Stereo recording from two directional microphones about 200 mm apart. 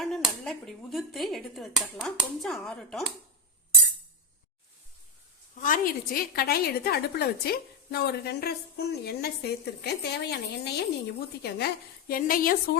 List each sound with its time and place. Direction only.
0.0 s speech: centre (ahead or behind)
5.5 s a woman's voice: 40° left (ahead or behind)